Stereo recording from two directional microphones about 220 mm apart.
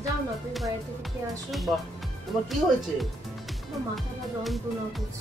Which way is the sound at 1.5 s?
Centre (ahead or behind).